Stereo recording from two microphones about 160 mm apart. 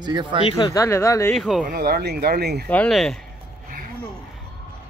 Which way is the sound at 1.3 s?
5° right (ahead or behind).